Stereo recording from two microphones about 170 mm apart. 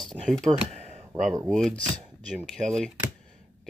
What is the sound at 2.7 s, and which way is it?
Speech, 5° left (ahead or behind).